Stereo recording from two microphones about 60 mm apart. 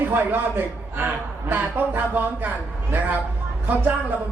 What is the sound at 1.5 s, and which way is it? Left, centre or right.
Speech, right.